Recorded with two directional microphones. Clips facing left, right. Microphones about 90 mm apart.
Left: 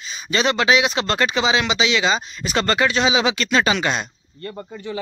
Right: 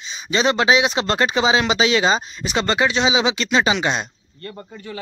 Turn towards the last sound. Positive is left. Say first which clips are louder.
# left 4 dB
turn(degrees=20)  # may be behind; listen again after turning